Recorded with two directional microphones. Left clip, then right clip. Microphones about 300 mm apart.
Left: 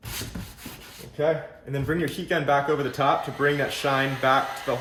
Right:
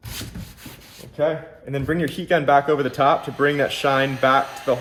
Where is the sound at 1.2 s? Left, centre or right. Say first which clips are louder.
Right 2 dB; centre.